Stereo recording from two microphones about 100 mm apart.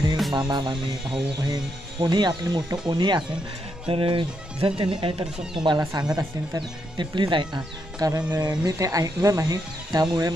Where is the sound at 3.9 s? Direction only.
60° right (ahead or behind).